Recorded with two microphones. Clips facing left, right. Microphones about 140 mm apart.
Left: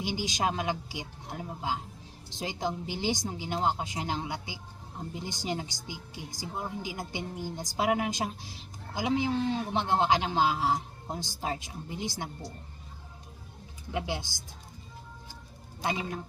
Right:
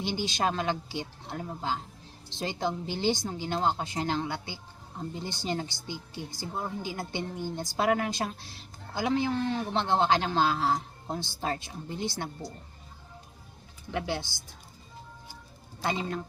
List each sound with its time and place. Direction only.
0.0 s a man's voice: 10° left (ahead or behind)
13.9 s a man's voice: 15° left (ahead or behind)